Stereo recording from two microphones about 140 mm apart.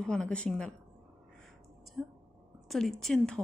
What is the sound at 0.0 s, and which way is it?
Speech, 5° left (ahead or behind).